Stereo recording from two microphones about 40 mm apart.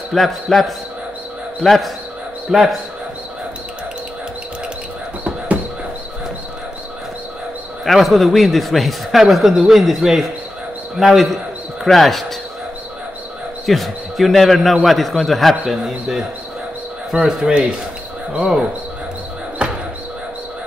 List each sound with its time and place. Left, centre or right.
0.1 s a man's voice: centre
2.5 s a man's voice: centre
7.8 s a man's voice: centre
13.7 s a man's voice: centre
15.6 s a man's voice: centre
17.1 s speech: right
19.6 s a sound: right